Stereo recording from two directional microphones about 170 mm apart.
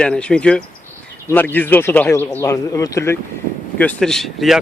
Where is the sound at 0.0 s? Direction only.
5° left (ahead or behind).